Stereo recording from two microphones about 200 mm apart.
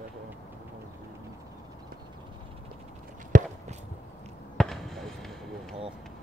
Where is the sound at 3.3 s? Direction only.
40° right (ahead or behind).